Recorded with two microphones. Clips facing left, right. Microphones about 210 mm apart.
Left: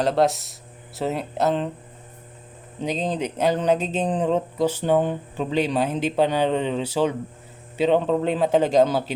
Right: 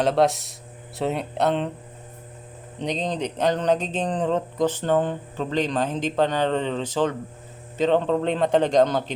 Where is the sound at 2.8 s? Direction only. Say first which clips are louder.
Left 1 dB; 5° left (ahead or behind).